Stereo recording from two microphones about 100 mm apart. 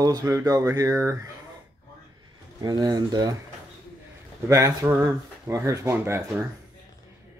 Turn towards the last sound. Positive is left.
turn(degrees=-25)  # may be behind; listen again after turning